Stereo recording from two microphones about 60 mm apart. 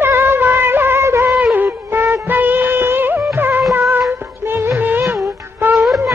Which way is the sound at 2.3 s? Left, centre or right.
Right.